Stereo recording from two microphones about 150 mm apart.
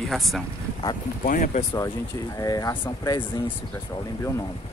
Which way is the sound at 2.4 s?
20° left (ahead or behind).